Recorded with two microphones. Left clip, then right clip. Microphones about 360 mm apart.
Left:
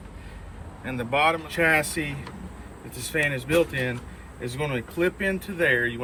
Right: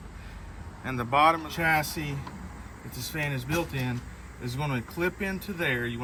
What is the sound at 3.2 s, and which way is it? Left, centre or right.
Speech, centre.